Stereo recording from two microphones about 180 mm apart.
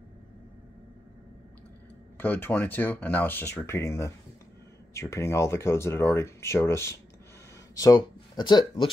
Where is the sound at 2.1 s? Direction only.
10° left (ahead or behind).